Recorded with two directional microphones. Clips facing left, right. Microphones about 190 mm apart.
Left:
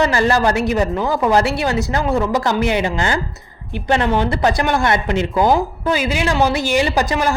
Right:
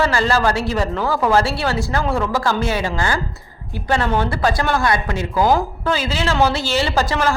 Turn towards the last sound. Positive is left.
turn(degrees=15)  # may be behind; listen again after turning